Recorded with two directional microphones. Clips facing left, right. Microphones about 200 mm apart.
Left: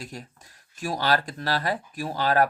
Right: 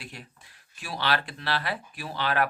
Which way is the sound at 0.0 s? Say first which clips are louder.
Left 5 dB; 40° left (ahead or behind).